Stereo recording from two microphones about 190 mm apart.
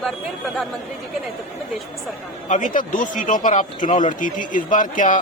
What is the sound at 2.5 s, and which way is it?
Speech, 45° left (ahead or behind).